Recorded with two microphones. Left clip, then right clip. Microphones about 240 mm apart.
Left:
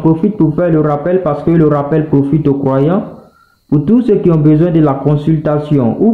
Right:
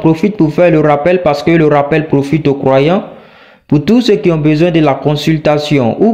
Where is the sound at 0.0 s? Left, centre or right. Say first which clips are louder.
Right 1 dB; right.